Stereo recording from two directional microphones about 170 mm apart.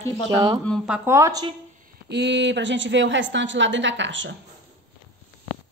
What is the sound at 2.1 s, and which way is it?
A woman's voice, 85° right.